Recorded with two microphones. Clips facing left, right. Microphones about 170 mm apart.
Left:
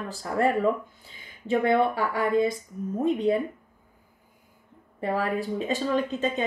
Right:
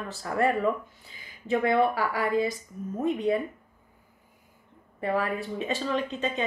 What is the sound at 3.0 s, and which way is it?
Speech, 30° left (ahead or behind).